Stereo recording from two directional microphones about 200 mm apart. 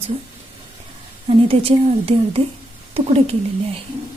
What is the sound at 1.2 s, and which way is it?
Speech, 30° right (ahead or behind).